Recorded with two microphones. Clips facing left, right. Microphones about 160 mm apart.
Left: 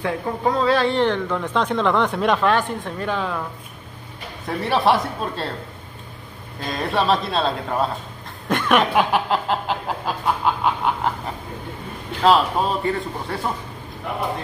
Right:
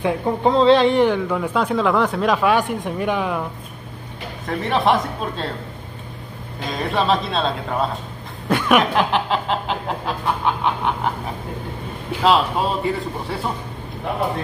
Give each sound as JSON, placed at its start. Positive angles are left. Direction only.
{"t": 0.0, "sound": "a woman's voice", "side_deg": -25}
{"t": 4.5, "sound": "a man's voice", "side_deg": 5}
{"t": 6.7, "sound": "a man's voice", "side_deg": 0}
{"t": 8.5, "sound": "chuckle", "side_deg": -5}
{"t": 8.9, "sound": "a sound", "side_deg": 5}
{"t": 12.2, "sound": "a man's voice", "side_deg": 0}